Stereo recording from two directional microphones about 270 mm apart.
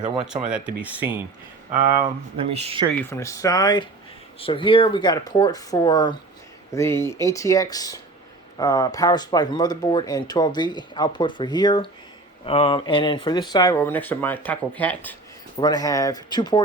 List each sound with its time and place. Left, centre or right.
0.5 s speech: centre
2.0 s speech: right
2.9 s speech: centre